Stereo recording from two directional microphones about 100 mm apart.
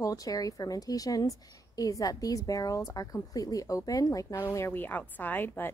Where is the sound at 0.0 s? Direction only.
35° left (ahead or behind).